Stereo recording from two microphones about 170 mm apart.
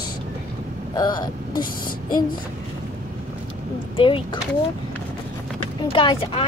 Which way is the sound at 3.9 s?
30° left (ahead or behind).